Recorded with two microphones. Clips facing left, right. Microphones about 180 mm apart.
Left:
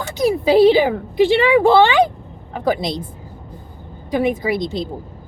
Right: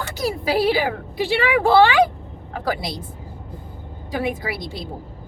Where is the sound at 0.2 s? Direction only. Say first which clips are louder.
Left 9 dB; 20° left (ahead or behind).